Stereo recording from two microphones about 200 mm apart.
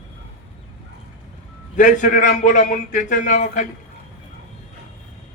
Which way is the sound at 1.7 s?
40° left (ahead or behind).